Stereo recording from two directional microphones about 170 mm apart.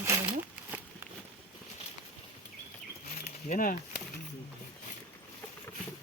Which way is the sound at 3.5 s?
55° left (ahead or behind).